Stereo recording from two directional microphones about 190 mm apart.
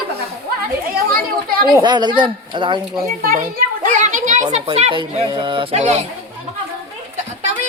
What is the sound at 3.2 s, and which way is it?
Children playing, 45° right (ahead or behind).